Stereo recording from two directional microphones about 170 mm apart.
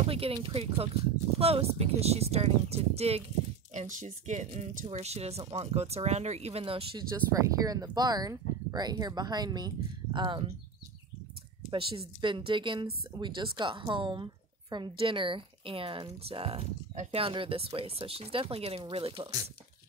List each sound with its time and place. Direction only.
0.1 s a woman's voice: 30° right (ahead or behind)
11.7 s a woman's voice: 30° right (ahead or behind)